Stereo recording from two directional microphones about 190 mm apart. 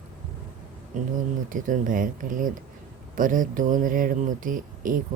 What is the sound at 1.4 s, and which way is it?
Speech, 45° right (ahead or behind).